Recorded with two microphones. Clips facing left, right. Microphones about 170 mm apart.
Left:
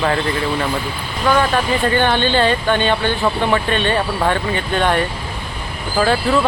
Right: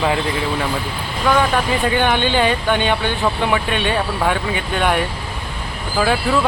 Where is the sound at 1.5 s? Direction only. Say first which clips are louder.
Left 1 dB; 10° right (ahead or behind).